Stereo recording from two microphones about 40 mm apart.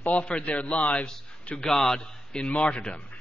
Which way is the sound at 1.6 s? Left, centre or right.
Centre.